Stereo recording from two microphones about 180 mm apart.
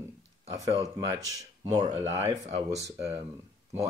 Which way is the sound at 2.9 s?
20° right (ahead or behind).